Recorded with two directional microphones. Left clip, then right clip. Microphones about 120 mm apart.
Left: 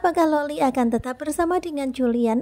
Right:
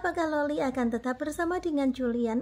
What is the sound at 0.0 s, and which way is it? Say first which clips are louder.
A woman's voice: left 8 dB; 45° left (ahead or behind).